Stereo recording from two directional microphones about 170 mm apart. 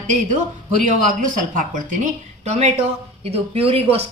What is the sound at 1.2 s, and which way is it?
A woman's voice, 50° right (ahead or behind).